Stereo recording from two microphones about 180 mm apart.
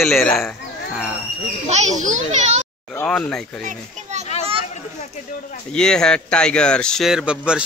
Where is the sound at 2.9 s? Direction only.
5° left (ahead or behind).